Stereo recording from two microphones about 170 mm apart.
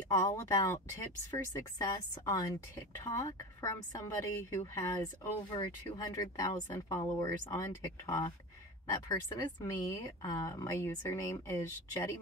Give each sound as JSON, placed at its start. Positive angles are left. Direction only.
{"t": 0.1, "sound": "a woman's voice", "side_deg": 20}